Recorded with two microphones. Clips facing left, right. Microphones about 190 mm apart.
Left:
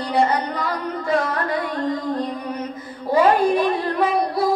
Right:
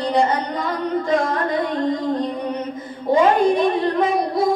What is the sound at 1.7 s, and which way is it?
Music, 25° right (ahead or behind).